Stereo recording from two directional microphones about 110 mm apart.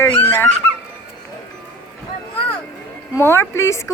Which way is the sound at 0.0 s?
20° left (ahead or behind).